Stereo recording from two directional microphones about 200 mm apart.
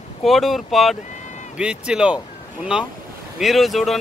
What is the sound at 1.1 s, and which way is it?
Run, 35° left (ahead or behind).